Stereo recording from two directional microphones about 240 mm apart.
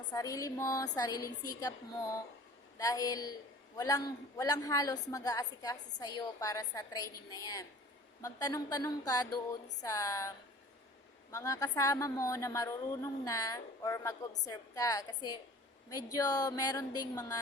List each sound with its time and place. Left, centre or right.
0.1 s a woman's voice: centre